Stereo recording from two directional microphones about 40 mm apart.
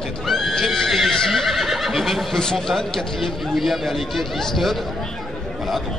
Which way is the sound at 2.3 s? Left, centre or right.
Centre.